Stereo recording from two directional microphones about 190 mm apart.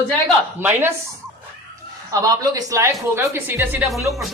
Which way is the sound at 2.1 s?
20° right (ahead or behind).